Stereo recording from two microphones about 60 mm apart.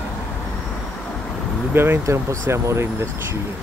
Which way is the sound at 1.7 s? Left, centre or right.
Right.